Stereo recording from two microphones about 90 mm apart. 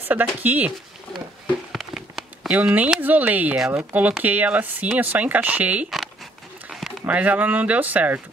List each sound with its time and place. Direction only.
0.1 s speech: 20° right (ahead or behind)
1.7 s a sound: centre (ahead or behind)
2.5 s speech: 15° right (ahead or behind)
7.1 s speech: 15° right (ahead or behind)